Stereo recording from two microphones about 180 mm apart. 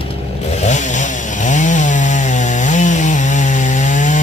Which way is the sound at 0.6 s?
40° left (ahead or behind).